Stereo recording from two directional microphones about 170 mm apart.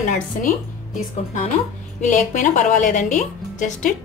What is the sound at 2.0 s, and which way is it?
A woman's voice, 45° left (ahead or behind).